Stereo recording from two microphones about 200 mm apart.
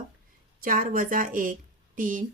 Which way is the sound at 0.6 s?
45° right (ahead or behind).